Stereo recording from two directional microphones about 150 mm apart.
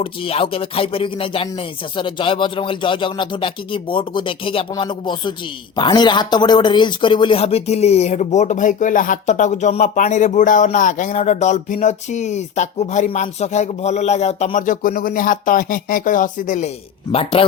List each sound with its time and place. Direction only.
0.0 s speech: 40° left (ahead or behind)